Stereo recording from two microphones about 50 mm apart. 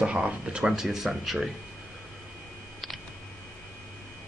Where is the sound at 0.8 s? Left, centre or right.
Centre.